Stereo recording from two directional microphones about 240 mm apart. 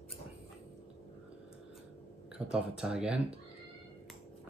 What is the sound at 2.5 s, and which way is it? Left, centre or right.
Speech, centre.